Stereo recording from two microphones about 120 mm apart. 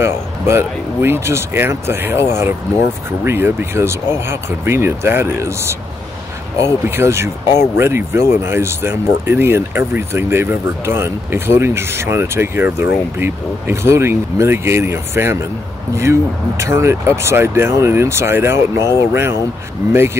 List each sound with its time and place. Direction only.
0.0 s speech: 20° right (ahead or behind)